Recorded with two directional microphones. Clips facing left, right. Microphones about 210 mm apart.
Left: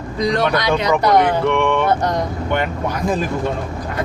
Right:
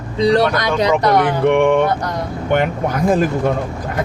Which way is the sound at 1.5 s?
50° right (ahead or behind).